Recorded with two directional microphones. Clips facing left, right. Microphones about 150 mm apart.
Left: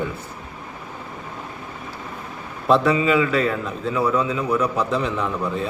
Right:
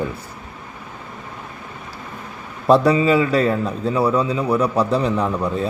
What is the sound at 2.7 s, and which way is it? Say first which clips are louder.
A man's voice: right 3 dB; 35° right (ahead or behind).